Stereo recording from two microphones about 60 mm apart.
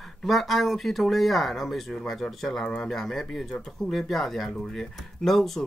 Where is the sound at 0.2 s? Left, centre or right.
Centre.